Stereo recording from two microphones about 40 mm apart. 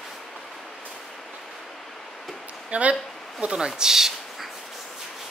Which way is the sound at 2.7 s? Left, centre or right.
Right.